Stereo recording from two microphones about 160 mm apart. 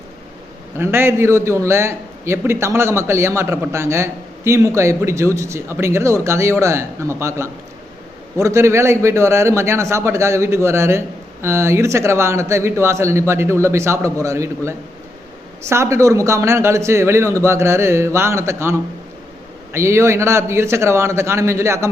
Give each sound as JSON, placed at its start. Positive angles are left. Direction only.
{"t": 0.8, "sound": "a man's voice", "side_deg": -15}